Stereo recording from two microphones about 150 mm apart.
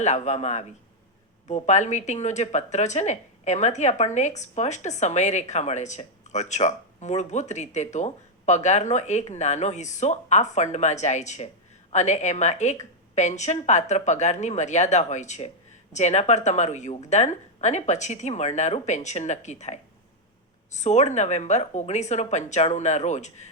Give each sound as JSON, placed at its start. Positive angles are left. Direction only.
{"t": 0.0, "sound": "speech", "side_deg": 50}